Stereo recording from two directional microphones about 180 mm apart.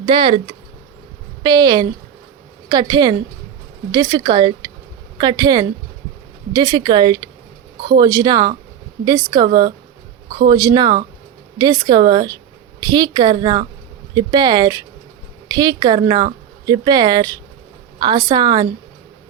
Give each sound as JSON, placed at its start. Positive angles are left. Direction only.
{"t": 0.0, "sound": "speech", "side_deg": -25}